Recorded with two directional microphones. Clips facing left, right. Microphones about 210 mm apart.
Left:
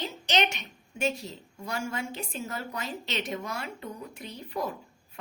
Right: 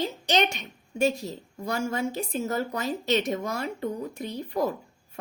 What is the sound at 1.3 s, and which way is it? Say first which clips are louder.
Speech: right 5 dB; 40° right (ahead or behind).